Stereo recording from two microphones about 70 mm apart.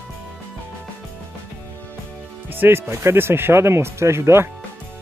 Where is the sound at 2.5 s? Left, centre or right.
Right.